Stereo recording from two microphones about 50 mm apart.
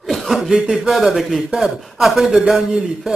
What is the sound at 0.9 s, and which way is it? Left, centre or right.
A man's voice, centre.